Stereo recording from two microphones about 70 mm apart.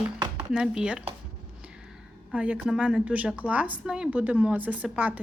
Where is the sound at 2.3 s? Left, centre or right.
Centre.